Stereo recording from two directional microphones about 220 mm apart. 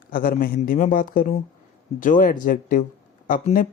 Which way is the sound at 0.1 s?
40° left (ahead or behind).